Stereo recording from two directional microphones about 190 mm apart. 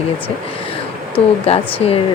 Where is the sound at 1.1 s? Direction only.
30° left (ahead or behind).